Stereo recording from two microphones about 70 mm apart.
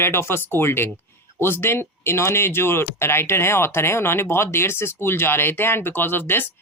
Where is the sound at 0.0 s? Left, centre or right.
Left.